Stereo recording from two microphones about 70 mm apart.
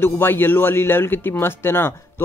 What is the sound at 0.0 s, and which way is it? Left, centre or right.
Speech, left.